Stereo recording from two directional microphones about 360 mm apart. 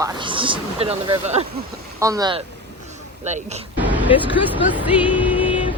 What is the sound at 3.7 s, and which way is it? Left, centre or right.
Music, centre.